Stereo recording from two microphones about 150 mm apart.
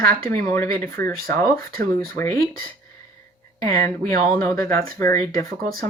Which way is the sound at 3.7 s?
70° right (ahead or behind).